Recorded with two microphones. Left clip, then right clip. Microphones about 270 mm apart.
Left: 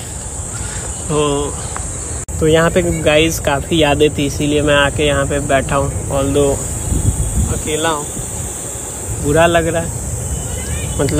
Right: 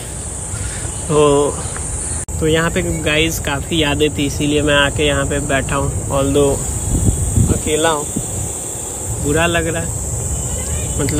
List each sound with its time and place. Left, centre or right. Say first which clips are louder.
1.1 s speech: right 4 dB; centre
6.1 s speech: even; centre
7.6 s speech: right 1 dB; centre
9.3 s speech: left 4 dB; centre
11.0 s speech: left 4 dB; centre